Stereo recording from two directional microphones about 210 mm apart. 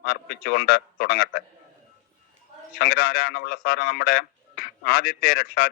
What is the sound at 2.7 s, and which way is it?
Speech, 45° left (ahead or behind).